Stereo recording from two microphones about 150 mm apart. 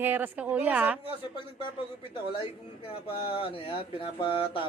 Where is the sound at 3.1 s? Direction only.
35° left (ahead or behind).